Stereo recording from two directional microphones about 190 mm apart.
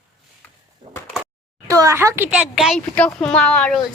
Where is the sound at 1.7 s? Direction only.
15° right (ahead or behind).